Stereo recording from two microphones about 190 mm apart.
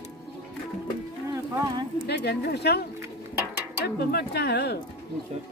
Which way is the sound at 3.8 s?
55° left (ahead or behind).